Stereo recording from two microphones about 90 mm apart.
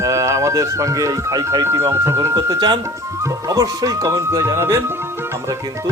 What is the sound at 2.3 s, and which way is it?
Speech, 50° right (ahead or behind).